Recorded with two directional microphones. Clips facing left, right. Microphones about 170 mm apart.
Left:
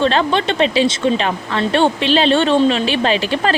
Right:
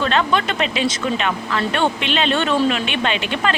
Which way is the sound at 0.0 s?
30° left (ahead or behind).